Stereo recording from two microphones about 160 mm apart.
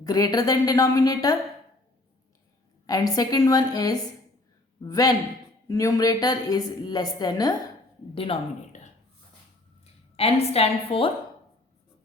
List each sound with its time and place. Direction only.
0.0 s a woman's voice: 25° left (ahead or behind)
2.8 s a woman's voice: 25° left (ahead or behind)
8.1 s speech: 35° left (ahead or behind)
9.8 s a woman's voice: 40° left (ahead or behind)